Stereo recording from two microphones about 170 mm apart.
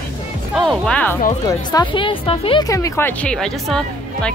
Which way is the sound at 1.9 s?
30° left (ahead or behind).